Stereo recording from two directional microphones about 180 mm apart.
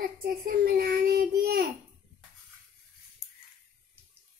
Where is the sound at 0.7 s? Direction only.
60° right (ahead or behind).